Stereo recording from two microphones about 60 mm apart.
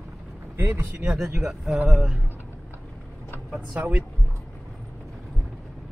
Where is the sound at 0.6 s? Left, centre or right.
Right.